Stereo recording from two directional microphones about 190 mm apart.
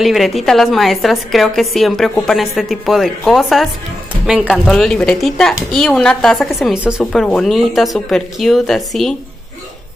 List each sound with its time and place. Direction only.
0.0 s speech: centre (ahead or behind)